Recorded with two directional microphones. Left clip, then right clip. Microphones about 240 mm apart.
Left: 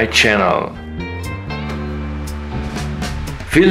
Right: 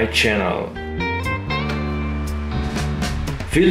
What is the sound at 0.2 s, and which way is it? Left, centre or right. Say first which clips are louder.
Speech: left 7 dB; left.